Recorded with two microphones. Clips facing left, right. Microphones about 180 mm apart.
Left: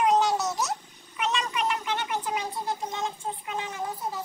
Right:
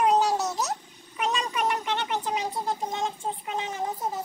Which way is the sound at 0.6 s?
40° right (ahead or behind).